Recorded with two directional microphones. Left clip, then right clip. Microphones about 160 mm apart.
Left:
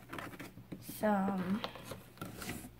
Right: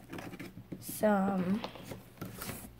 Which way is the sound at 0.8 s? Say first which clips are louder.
Right 4 dB; 55° right (ahead or behind).